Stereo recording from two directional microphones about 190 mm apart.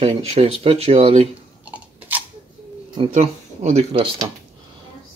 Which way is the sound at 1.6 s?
10° right (ahead or behind).